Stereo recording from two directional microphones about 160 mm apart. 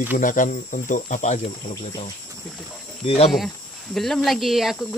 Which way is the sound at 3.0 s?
40° left (ahead or behind).